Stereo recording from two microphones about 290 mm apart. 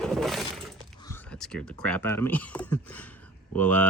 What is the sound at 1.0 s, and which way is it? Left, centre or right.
Speech, centre.